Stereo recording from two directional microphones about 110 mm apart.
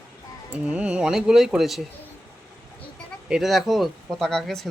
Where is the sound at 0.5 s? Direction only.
10° right (ahead or behind).